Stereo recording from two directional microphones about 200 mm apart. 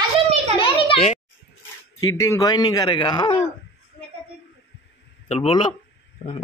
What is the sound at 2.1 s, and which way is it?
Speech, 15° left (ahead or behind).